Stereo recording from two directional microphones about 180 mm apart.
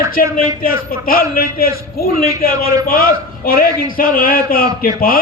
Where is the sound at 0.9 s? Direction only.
55° left (ahead or behind).